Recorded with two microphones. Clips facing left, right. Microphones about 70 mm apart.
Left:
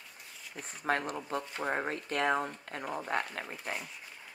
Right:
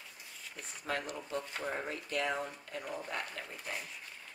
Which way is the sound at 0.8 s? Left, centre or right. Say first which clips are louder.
Left 6 dB; left.